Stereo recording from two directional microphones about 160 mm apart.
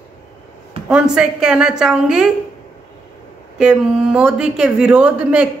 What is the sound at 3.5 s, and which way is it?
Speech, 5° right (ahead or behind).